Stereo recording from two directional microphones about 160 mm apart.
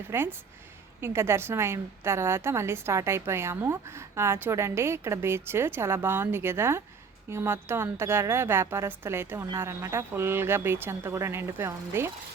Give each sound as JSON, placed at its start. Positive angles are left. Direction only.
{"t": 0.1, "sound": "a woman's voice", "side_deg": -15}